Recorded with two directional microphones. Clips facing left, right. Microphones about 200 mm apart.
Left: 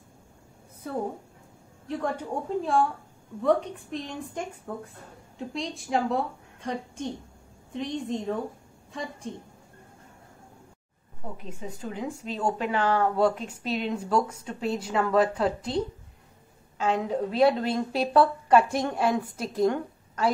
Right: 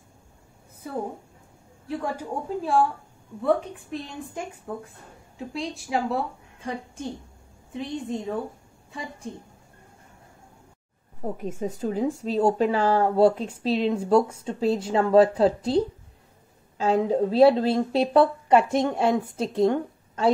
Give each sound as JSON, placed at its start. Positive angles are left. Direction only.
{"t": 1.9, "sound": "a woman's voice", "side_deg": -5}
{"t": 11.2, "sound": "a woman's voice", "side_deg": -45}